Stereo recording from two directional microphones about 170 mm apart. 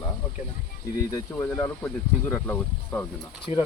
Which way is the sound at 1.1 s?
15° left (ahead or behind).